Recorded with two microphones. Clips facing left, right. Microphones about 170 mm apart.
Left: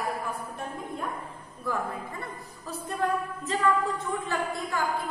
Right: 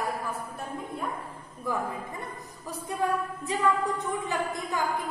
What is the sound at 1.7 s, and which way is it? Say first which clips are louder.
Speech: even; 15° right (ahead or behind).